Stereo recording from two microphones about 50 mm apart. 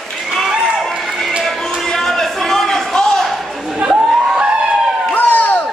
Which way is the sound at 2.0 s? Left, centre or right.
Centre.